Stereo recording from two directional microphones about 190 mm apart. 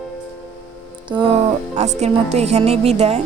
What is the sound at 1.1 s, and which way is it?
Speech, 30° right (ahead or behind).